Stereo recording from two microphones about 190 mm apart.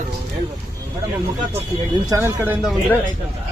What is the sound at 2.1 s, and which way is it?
Speech, 10° right (ahead or behind).